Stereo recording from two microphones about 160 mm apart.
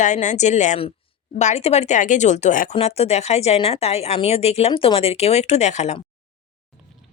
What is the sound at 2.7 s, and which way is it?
Speech, 40° left (ahead or behind).